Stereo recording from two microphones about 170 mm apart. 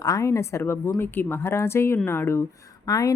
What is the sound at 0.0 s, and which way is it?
A woman's voice, 20° left (ahead or behind).